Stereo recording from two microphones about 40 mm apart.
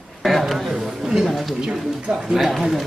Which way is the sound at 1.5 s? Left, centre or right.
Centre.